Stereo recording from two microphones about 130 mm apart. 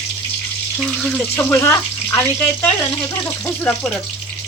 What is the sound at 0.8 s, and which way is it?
Speech, centre (ahead or behind).